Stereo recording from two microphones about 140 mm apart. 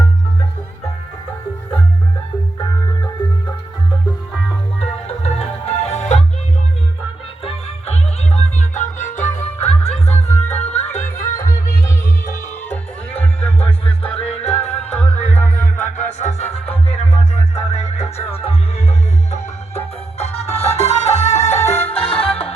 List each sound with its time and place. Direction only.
4.8 s music: 50° left (ahead or behind)
7.4 s music: 50° left (ahead or behind)
12.7 s music: 10° left (ahead or behind)
13.6 s music: 45° left (ahead or behind)
15.3 s music: 15° left (ahead or behind)
16.1 s music: 55° left (ahead or behind)